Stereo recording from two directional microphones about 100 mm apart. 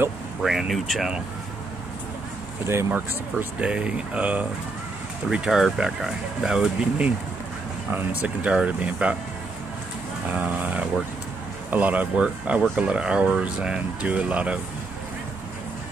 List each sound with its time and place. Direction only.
0.4 s speech: centre (ahead or behind)
2.6 s speech: 25° right (ahead or behind)
3.6 s speech: 10° right (ahead or behind)
10.2 s speech: 15° right (ahead or behind)